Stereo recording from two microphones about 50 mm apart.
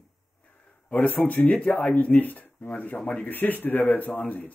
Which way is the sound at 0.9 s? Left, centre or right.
Left.